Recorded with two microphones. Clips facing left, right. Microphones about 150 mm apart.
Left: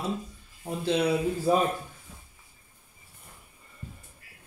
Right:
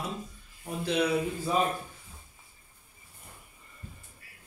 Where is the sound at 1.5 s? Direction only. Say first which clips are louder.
Left 5 dB; 50° left (ahead or behind).